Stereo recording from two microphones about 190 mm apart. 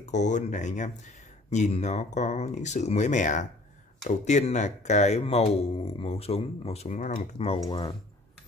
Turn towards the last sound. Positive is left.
turn(degrees=25)  # may be behind; listen again after turning